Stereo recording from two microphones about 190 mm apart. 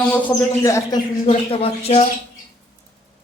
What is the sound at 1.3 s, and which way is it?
Speech, 30° left (ahead or behind).